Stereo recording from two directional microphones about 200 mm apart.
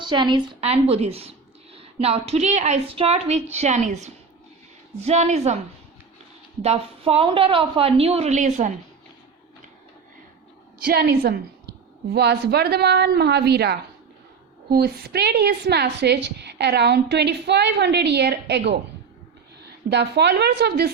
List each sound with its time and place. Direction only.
0.0 s a woman's voice: 20° right (ahead or behind)
6.6 s a woman's voice: 30° right (ahead or behind)
10.8 s a woman's voice: 50° right (ahead or behind)
19.9 s a woman's voice: 60° right (ahead or behind)